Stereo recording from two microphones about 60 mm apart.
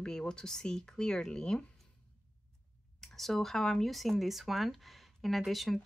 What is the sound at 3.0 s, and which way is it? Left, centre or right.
Speech, centre.